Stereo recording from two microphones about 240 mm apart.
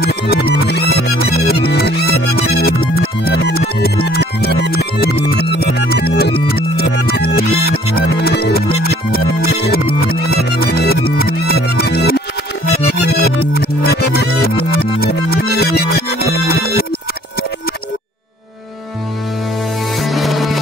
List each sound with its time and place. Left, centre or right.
0.0 s music: left
20.0 s music: centre